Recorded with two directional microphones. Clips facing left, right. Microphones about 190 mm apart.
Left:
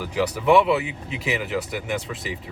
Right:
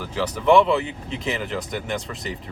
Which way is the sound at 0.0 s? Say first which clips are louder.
Left 1 dB; 10° left (ahead or behind).